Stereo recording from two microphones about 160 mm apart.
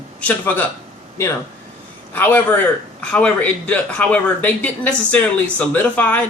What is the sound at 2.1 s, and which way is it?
A man's voice, 10° left (ahead or behind).